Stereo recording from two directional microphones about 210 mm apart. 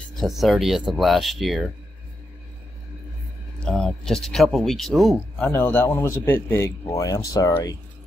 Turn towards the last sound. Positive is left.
turn(degrees=15)  # may be behind; listen again after turning